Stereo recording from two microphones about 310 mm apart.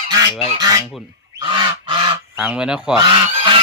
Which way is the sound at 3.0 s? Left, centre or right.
Centre.